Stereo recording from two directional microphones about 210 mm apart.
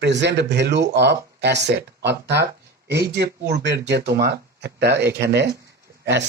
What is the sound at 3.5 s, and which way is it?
Speech, 55° right (ahead or behind).